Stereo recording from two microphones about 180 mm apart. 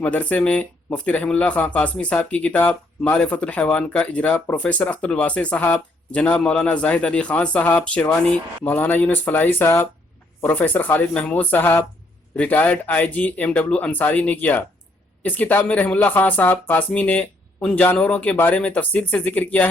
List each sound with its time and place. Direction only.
0.0 s speech: 10° left (ahead or behind)